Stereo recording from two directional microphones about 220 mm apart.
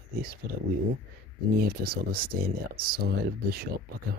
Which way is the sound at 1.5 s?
45° right (ahead or behind).